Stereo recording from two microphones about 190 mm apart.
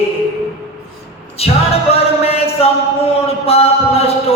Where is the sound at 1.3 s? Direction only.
30° left (ahead or behind).